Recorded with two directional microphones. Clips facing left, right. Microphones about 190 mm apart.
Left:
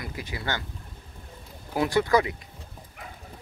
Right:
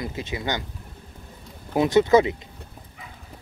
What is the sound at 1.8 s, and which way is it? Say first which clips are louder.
Speech: right 6 dB; 20° right (ahead or behind).